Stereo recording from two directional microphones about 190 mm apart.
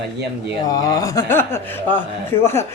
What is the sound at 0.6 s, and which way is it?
Speech, 20° left (ahead or behind).